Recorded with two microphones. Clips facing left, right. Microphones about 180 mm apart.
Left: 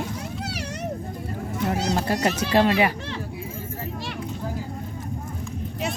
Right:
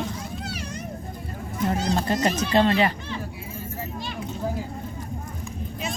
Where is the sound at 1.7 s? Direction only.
75° left (ahead or behind).